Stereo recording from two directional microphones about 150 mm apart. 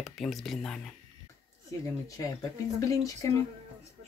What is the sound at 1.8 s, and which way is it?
Speech, 20° left (ahead or behind).